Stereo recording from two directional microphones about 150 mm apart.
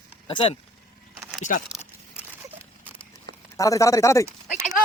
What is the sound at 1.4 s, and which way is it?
Speech, 55° left (ahead or behind).